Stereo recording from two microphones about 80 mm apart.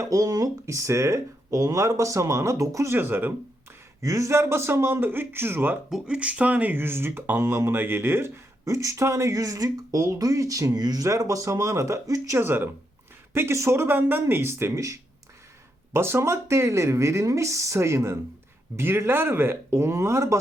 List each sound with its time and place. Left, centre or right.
0.0 s speech: right
4.0 s speech: right
5.9 s speech: centre; by 12.4 s right
12.4 s speech: right